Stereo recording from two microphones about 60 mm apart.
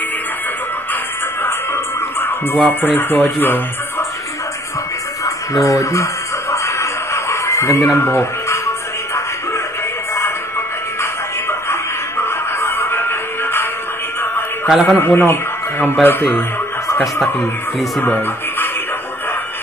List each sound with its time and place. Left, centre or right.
1.4 s a sound: left
2.8 s speech: left
5.2 s speech: left
6.5 s a sound: left
11.0 s music: left
14.7 s a man's voice: centre
15.0 s speech: left
18.0 s speech: left